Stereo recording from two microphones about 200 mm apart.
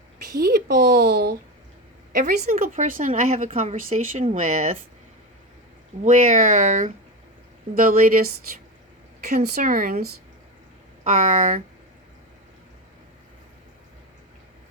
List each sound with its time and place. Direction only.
0.3 s a woman's voice: 50° right (ahead or behind)
6.1 s a woman's voice: 40° right (ahead or behind)
9.4 s speech: 40° right (ahead or behind)